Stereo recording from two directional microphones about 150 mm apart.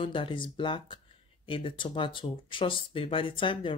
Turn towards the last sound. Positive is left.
turn(degrees=35)  # may be behind; listen again after turning